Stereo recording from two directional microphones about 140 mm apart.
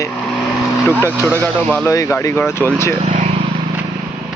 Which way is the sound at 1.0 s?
15° right (ahead or behind).